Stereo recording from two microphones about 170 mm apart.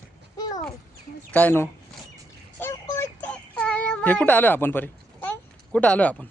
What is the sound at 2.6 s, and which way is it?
Child singing, 15° left (ahead or behind).